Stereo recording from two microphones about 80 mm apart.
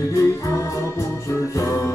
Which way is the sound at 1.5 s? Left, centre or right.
Left.